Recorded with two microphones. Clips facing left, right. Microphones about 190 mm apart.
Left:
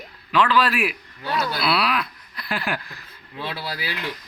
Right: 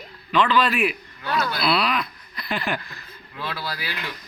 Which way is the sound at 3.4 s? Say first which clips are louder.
Left 1 dB; 25° left (ahead or behind).